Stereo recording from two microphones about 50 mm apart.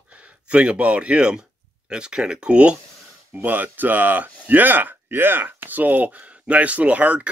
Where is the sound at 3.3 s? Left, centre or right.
Right.